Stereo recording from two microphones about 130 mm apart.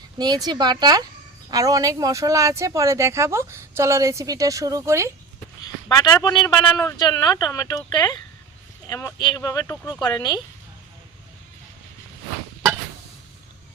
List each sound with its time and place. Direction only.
0.2 s a woman's voice: 30° right (ahead or behind)
5.9 s a man's voice: 30° left (ahead or behind)